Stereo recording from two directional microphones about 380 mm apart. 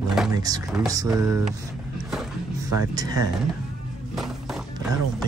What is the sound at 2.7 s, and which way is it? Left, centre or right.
Speech, centre.